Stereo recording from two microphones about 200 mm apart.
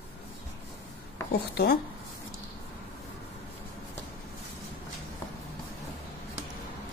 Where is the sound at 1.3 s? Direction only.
55° left (ahead or behind).